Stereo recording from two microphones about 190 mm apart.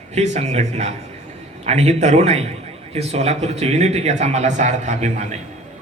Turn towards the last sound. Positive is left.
turn(degrees=-35)  # may be behind; listen again after turning